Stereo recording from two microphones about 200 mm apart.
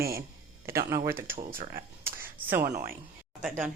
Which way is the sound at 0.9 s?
15° right (ahead or behind).